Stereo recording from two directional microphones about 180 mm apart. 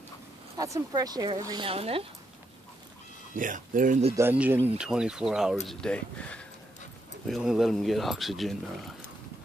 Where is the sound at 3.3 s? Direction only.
45° right (ahead or behind).